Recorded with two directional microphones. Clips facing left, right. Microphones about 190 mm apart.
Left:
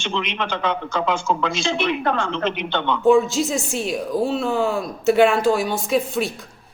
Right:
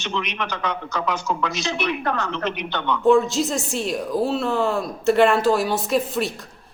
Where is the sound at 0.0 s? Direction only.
25° left (ahead or behind).